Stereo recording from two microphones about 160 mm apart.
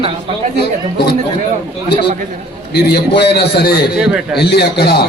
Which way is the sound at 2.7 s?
90° left.